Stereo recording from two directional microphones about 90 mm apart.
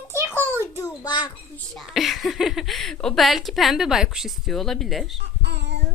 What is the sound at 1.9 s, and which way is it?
A woman's voice, centre (ahead or behind).